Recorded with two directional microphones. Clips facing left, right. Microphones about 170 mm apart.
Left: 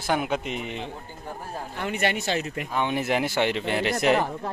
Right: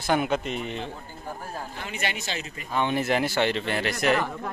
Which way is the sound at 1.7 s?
60° left (ahead or behind).